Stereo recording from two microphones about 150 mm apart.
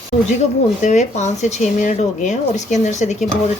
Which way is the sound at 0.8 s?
50° left (ahead or behind).